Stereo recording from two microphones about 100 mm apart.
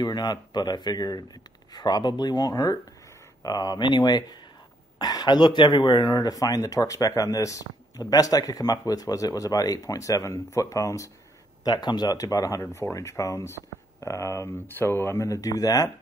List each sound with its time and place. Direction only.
0.0 s speech: 45° left (ahead or behind)